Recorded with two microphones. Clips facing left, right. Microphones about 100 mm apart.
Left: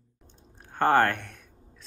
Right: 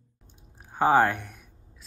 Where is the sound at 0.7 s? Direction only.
5° right (ahead or behind).